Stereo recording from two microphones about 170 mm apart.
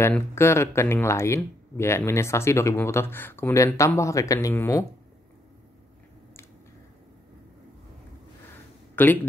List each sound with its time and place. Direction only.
0.0 s speech: 15° left (ahead or behind)
8.9 s speech: 10° left (ahead or behind)